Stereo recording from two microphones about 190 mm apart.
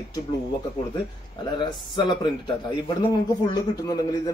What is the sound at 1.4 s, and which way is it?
Speech, 25° left (ahead or behind).